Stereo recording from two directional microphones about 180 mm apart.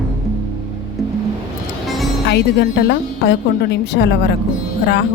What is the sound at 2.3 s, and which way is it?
Speech, 65° left (ahead or behind).